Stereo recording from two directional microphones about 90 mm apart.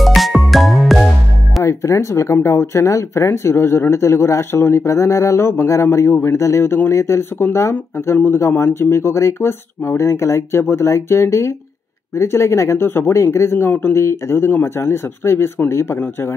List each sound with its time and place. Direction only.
0.0 s music: centre (ahead or behind)
1.6 s speech: 35° left (ahead or behind)